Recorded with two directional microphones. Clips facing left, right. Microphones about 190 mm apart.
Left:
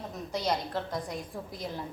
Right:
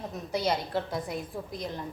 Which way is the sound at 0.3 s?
5° right (ahead or behind).